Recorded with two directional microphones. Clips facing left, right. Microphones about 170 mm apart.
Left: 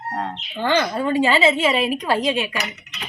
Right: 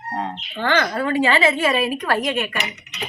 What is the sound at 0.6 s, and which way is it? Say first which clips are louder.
A woman's voice: left 1 dB; 10° left (ahead or behind).